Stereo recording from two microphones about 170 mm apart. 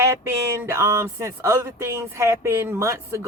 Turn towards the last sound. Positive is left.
turn(degrees=-15)  # may be behind; listen again after turning